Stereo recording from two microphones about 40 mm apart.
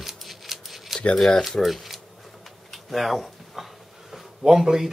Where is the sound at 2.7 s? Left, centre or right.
Centre.